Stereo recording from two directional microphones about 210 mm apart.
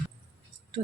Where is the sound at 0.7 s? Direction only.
30° right (ahead or behind).